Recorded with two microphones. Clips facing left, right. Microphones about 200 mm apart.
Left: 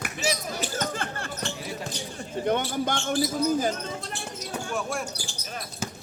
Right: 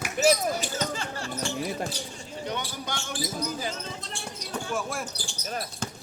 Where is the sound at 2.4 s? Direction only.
50° left (ahead or behind).